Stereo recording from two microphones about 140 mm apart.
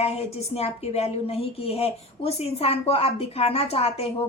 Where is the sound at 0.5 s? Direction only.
45° left (ahead or behind).